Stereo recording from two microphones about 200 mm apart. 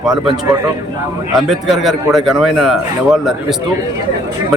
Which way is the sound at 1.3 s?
Centre (ahead or behind).